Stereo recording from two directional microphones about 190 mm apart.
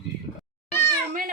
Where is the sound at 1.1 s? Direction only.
45° right (ahead or behind).